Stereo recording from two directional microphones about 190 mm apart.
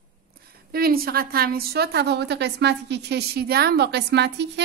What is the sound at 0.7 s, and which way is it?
A woman's voice, 50° right (ahead or behind).